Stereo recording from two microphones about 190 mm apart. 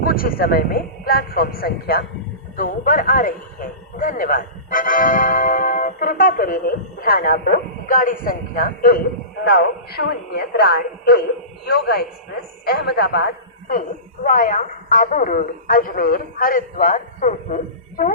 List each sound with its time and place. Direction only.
0.0 s a man's voice: 50° left (ahead or behind)